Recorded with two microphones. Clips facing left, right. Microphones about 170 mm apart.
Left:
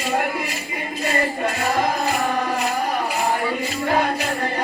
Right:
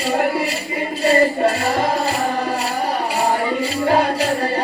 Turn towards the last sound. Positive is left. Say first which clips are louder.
# right 4 dB
turn(degrees=-30)  # may be behind; listen again after turning